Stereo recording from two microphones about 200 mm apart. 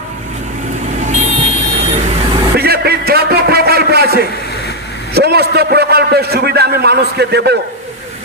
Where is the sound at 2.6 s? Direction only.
50° right (ahead or behind).